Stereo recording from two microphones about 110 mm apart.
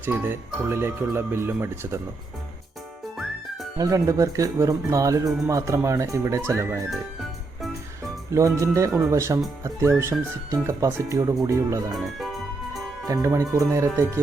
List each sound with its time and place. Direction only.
0.0 s speech: 20° right (ahead or behind)
3.8 s speech: 30° right (ahead or behind)
6.9 s music: centre (ahead or behind)
8.3 s speech: 30° right (ahead or behind)
11.9 s organ: centre (ahead or behind)
13.2 s speech: 25° right (ahead or behind)